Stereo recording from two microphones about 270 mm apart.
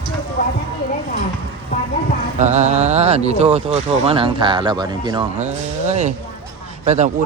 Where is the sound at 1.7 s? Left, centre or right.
Left.